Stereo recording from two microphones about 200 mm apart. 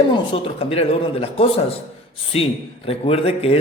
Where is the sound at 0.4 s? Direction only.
30° left (ahead or behind).